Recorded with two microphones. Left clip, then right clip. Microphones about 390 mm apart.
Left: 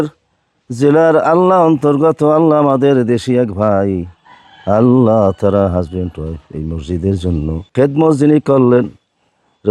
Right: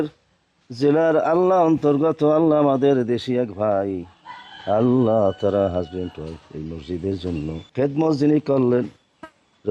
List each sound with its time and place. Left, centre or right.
0.7 s speech: left